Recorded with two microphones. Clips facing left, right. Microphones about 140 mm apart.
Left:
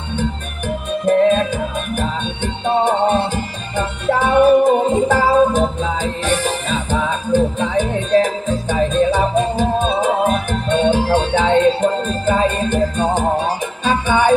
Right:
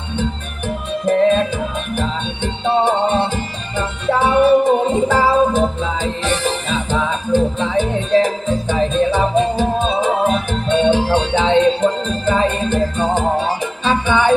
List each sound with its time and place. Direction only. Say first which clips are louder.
2.0 s music: right 1 dB; 45° left (ahead or behind)